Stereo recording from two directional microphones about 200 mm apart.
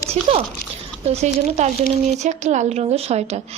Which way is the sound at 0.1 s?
30° right (ahead or behind).